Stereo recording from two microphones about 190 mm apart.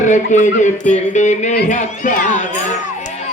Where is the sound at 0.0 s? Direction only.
40° left (ahead or behind).